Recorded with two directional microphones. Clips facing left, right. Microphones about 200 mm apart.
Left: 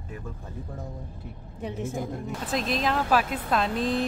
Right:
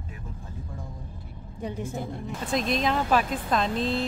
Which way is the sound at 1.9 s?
5° left (ahead or behind).